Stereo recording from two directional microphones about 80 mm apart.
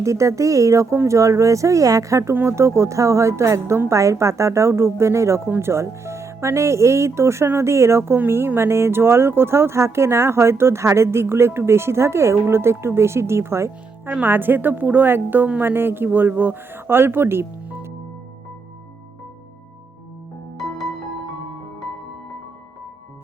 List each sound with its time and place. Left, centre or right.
0.0 s speech: right
14.1 s a woman's voice: right